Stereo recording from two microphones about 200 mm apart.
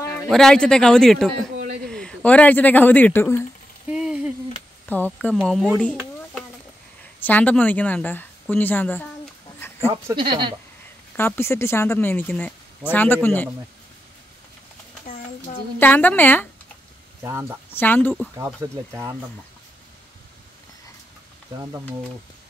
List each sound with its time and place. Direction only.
0.3 s speech: centre (ahead or behind)
3.9 s a sound: 5° right (ahead or behind)
4.8 s speech: 10° left (ahead or behind)
7.2 s speech: 10° left (ahead or behind)
10.1 s speech: 15° right (ahead or behind)
11.1 s speech: 10° left (ahead or behind)
15.8 s speech: 10° left (ahead or behind)
17.2 s speech: 10° right (ahead or behind)
17.6 s speech: 10° left (ahead or behind)
18.3 s speech: 15° right (ahead or behind)